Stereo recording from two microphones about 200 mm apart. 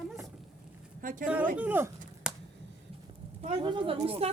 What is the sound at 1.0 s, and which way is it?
Speech, 45° right (ahead or behind).